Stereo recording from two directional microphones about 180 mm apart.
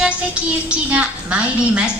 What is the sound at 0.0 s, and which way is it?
A woman's voice, 5° right (ahead or behind).